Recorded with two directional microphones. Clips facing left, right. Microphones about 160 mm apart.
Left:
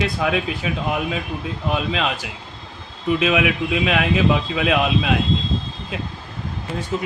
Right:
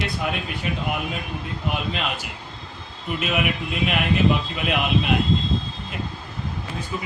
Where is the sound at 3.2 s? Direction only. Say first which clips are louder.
Left 4 dB; 90° left.